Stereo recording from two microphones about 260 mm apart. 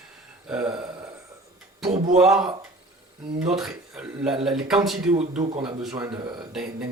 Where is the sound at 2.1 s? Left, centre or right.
Centre.